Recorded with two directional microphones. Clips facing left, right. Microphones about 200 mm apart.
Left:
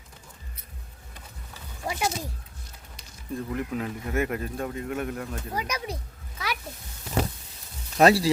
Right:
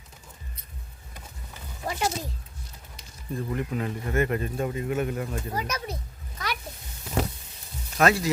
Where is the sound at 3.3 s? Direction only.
Centre (ahead or behind).